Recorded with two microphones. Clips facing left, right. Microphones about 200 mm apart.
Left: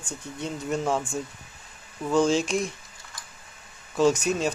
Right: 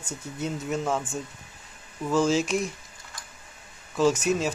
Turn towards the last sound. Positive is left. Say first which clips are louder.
# left 1 dB
turn(degrees=0)  # may be behind; listen again after turning